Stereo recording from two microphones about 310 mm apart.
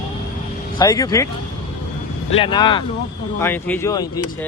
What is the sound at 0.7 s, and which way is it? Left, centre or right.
Speech, centre.